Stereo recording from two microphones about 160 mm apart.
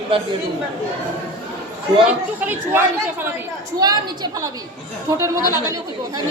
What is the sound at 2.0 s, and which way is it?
Speech, 10° right (ahead or behind).